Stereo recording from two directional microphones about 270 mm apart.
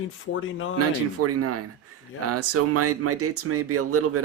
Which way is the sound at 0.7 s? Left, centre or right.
Right.